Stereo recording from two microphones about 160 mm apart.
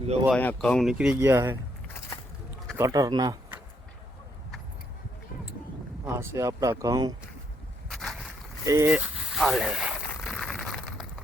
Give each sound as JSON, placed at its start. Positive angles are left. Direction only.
{"t": 0.3, "sound": "speech", "side_deg": 5}
{"t": 2.7, "sound": "speech", "side_deg": -20}
{"t": 6.1, "sound": "speech", "side_deg": -20}
{"t": 7.9, "sound": "boat", "side_deg": 0}
{"t": 8.6, "sound": "speech", "side_deg": -20}
{"t": 8.9, "sound": "a sound", "side_deg": -5}